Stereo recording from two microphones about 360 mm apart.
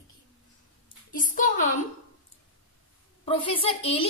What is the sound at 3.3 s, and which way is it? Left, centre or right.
Speech, centre.